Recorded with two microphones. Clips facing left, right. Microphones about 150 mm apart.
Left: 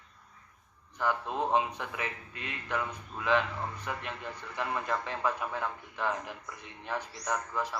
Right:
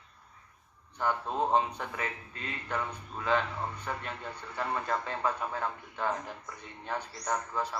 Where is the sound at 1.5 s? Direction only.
5° left (ahead or behind).